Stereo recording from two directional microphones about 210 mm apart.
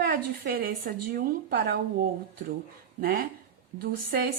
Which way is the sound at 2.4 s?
60° right (ahead or behind).